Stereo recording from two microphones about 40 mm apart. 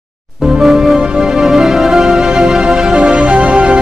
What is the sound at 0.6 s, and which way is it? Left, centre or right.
Music, centre.